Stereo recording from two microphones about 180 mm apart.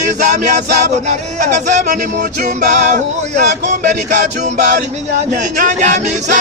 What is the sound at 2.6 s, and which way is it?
Speech, 45° right (ahead or behind).